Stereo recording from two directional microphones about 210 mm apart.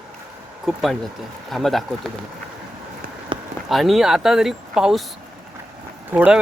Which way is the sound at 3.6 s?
Centre (ahead or behind).